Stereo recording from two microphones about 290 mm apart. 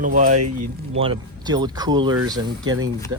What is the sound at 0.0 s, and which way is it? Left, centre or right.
Speech, right.